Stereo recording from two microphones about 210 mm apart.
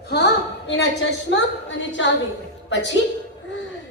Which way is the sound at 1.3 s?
60° left (ahead or behind).